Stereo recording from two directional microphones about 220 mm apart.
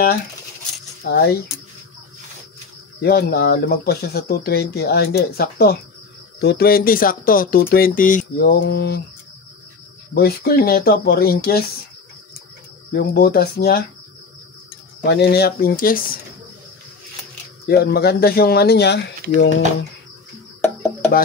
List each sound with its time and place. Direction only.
1.0 s speech: 45° left (ahead or behind)
3.0 s speech: 45° left (ahead or behind)
10.1 s speech: 45° left (ahead or behind)
12.9 s speech: 45° left (ahead or behind)
15.0 s speech: 45° left (ahead or behind)
17.6 s speech: 45° left (ahead or behind)
20.6 s music: 10° left (ahead or behind)